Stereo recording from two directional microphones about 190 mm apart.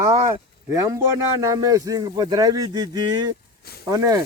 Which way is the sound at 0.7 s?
15° right (ahead or behind).